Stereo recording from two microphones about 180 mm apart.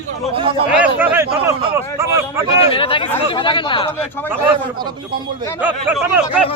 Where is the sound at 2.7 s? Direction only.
30° left (ahead or behind).